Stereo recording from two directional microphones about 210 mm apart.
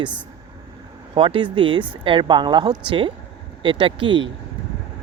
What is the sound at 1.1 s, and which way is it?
Speech, 25° right (ahead or behind).